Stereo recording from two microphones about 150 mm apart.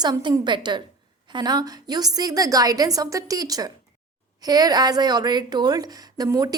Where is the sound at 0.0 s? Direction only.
30° right (ahead or behind).